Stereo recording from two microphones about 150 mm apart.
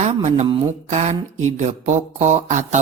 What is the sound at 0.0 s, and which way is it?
Speech, 50° right (ahead or behind).